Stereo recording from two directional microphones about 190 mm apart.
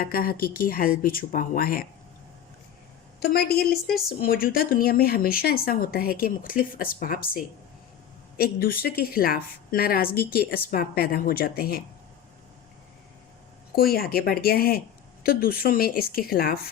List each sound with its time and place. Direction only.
0.0 s a woman's voice: 50° left (ahead or behind)
3.2 s a woman's voice: 55° left (ahead or behind)
13.7 s a woman's voice: 55° left (ahead or behind)